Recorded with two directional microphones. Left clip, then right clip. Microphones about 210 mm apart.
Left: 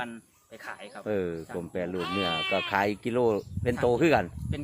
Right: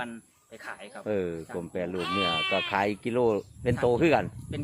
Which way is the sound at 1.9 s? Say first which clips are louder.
Right 2 dB; 35° right (ahead or behind).